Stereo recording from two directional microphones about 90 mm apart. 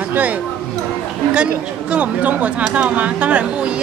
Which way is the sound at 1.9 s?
15° right (ahead or behind).